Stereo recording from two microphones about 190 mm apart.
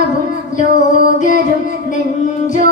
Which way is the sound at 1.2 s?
40° left (ahead or behind).